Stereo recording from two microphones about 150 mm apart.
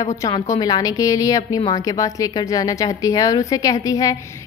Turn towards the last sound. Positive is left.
turn(degrees=20)  # may be behind; listen again after turning